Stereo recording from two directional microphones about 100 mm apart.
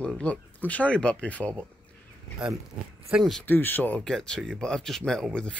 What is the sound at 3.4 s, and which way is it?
Speech, 20° left (ahead or behind).